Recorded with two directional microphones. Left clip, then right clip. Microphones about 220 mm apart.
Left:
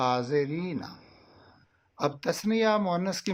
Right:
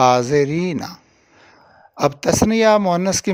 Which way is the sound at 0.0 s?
45° right (ahead or behind).